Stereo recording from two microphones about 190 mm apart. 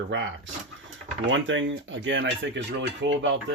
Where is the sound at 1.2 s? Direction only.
85° right.